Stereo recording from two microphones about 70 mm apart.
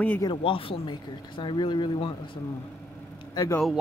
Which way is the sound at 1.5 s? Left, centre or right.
Left.